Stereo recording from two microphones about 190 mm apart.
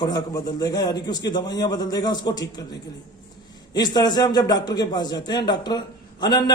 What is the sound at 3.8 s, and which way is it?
A man's voice, 20° left (ahead or behind).